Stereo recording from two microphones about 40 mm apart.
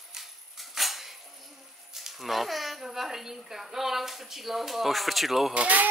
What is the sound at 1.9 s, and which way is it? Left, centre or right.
A child's voice, centre.